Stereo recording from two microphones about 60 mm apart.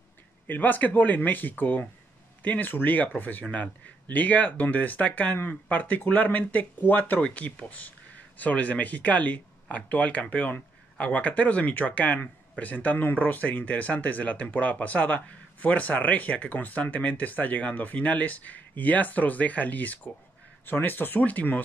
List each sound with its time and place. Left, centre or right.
0.5 s speech: left